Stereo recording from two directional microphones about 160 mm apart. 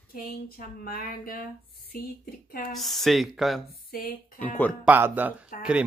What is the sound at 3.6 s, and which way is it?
Speech, 70° left (ahead or behind).